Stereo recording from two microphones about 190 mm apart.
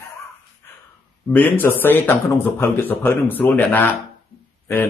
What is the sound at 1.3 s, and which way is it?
Speech, 10° left (ahead or behind).